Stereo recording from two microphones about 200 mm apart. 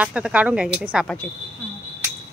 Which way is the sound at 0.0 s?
5° right (ahead or behind).